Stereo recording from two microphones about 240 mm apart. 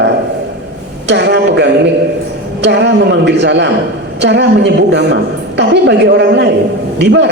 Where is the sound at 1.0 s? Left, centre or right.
Right.